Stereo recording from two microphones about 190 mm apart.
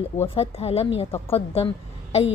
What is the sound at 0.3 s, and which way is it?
A woman's voice, 30° left (ahead or behind).